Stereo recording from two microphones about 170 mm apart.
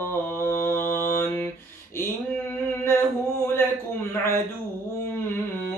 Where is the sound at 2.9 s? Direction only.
15° left (ahead or behind).